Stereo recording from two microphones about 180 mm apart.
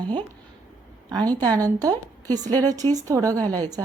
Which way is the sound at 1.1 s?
20° right (ahead or behind).